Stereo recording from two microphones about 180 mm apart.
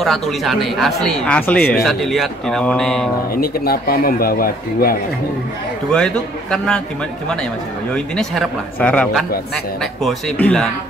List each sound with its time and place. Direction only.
0.0 s speech: centre (ahead or behind)
3.3 s speech: 55° left (ahead or behind)
5.9 s speech: 5° left (ahead or behind)
7.9 s speech: 5° left (ahead or behind)